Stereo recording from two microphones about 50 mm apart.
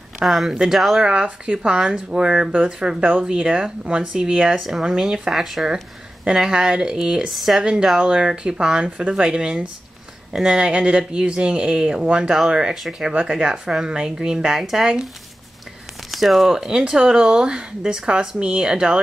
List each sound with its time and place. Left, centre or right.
0.2 s speech: centre
1.0 s speech: centre
3.0 s speech: right
3.3 s speech: centre
4.6 s speech: centre
7.2 s speech: centre
16.1 s speech: centre